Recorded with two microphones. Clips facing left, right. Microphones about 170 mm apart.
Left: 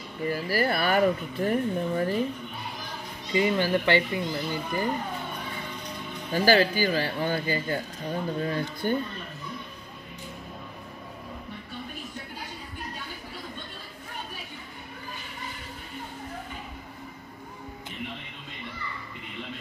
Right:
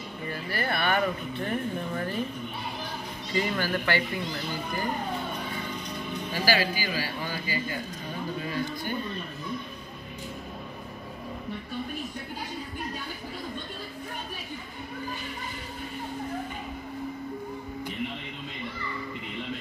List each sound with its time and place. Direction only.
0.3 s speech: 35° left (ahead or behind)
3.3 s speech: 20° left (ahead or behind)
6.3 s speech: 50° left (ahead or behind)